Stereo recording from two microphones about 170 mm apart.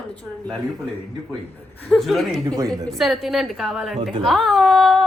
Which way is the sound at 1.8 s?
Centre (ahead or behind).